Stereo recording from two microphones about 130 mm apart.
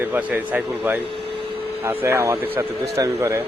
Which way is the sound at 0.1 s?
10° right (ahead or behind).